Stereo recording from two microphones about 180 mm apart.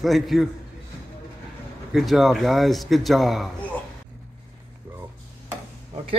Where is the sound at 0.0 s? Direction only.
Centre (ahead or behind).